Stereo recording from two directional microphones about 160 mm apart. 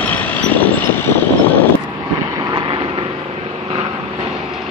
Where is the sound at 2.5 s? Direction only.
30° right (ahead or behind).